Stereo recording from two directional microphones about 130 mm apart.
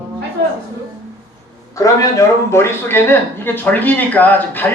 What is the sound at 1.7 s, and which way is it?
Speech, 25° left (ahead or behind).